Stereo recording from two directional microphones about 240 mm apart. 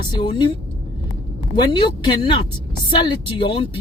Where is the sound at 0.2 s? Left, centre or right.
Centre.